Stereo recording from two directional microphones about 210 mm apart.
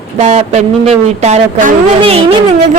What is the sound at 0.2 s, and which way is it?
A woman's voice, 30° right (ahead or behind).